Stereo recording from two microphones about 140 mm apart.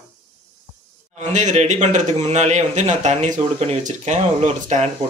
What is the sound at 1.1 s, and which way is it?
A man's voice, 60° right (ahead or behind).